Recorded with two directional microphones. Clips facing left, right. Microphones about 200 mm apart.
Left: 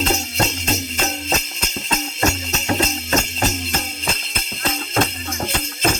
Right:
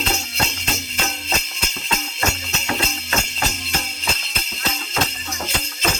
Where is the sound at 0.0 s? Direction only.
45° left (ahead or behind).